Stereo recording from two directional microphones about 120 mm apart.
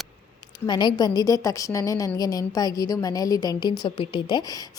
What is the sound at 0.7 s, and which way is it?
A woman's voice, 35° left (ahead or behind).